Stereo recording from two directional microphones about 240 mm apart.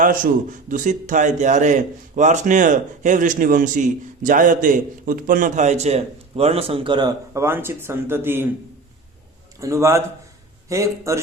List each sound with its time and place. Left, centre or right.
0.0 s a man's voice: right; by 8.4 s centre
9.6 s a man's voice: centre